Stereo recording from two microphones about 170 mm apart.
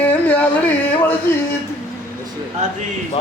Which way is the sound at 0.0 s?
10° left (ahead or behind).